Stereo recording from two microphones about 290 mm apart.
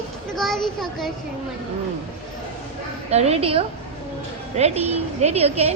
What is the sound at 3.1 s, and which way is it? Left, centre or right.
Speech, right.